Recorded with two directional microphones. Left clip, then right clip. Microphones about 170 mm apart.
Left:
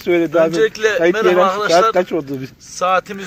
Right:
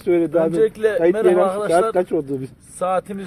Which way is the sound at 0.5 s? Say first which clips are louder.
Left 2 dB; 5° right (ahead or behind).